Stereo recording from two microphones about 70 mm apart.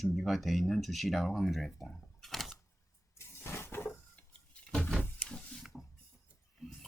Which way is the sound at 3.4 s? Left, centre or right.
Left.